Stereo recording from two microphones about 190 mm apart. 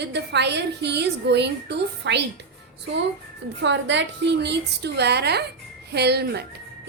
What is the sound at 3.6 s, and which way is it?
A woman's voice, 70° right (ahead or behind).